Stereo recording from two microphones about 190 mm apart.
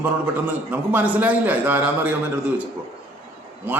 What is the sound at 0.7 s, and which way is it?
A man's voice, 10° right (ahead or behind).